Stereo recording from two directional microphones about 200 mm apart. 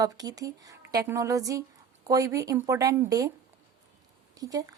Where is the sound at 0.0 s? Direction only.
20° right (ahead or behind).